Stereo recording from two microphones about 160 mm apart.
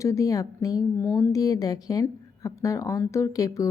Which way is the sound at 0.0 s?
20° left (ahead or behind).